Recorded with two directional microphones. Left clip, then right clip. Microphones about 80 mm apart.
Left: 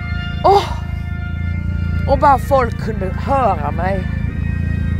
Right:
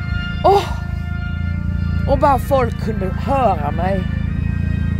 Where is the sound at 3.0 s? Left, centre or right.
Right.